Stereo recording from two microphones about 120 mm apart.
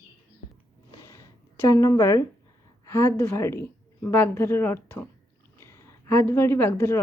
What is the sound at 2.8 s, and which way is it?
A woman's voice, 25° left (ahead or behind).